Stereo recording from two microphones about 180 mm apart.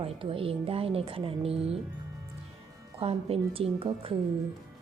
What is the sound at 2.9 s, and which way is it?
A woman's voice, 30° right (ahead or behind).